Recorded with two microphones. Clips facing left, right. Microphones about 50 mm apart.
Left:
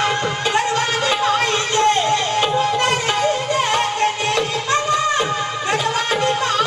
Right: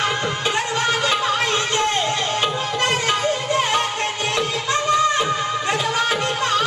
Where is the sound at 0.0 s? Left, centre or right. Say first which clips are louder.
Left 2 dB; centre.